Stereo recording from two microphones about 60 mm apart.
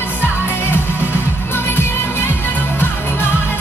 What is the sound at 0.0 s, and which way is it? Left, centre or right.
Music, left.